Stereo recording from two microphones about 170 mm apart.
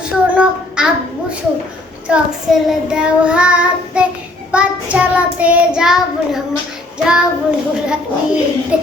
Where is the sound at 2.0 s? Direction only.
5° right (ahead or behind).